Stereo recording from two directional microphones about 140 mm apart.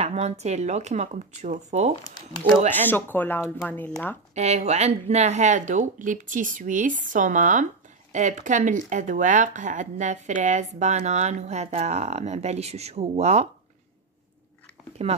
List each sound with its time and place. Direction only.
0.0 s speech: 50° right (ahead or behind)
2.7 s speech: 15° left (ahead or behind)
4.4 s speech: 55° right (ahead or behind)